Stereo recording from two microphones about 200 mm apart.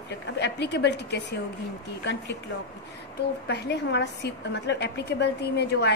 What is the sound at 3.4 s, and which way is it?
A woman's voice, 55° left (ahead or behind).